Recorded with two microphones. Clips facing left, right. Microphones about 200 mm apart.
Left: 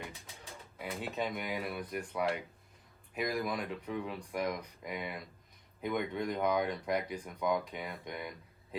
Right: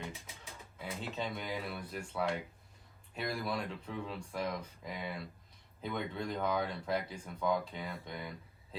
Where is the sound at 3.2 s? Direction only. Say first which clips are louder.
Left 3 dB; 15° left (ahead or behind).